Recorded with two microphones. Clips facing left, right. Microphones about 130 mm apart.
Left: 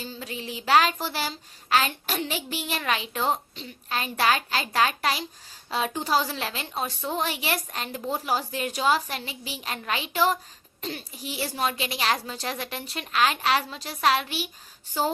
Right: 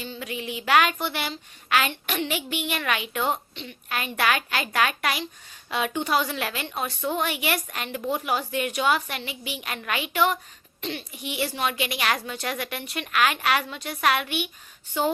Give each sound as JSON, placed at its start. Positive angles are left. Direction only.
{"t": 0.0, "sound": "a woman's voice", "side_deg": 35}